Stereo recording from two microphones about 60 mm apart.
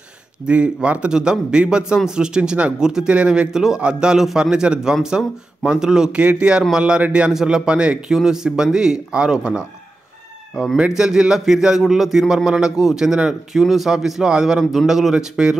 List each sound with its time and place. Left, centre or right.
0.5 s speech: centre
14.6 s a man's voice: centre
14.9 s speech: centre